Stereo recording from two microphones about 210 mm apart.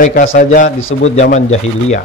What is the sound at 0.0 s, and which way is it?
Speech, 40° left (ahead or behind).